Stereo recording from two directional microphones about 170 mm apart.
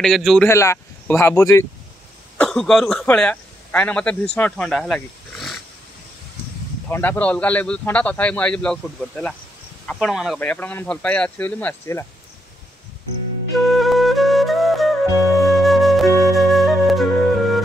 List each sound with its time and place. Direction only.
0.0 s speech: centre (ahead or behind)
0.5 s a man's voice: 15° left (ahead or behind)
2.3 s a man's voice: 5° left (ahead or behind)
6.9 s a man's voice: 10° left (ahead or behind)
10.4 s a man's voice: 10° left (ahead or behind)
13.7 s music: centre (ahead or behind)
15.4 s flute: centre (ahead or behind)